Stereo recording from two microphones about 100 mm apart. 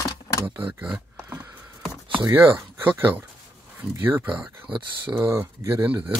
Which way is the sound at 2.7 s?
20° right (ahead or behind).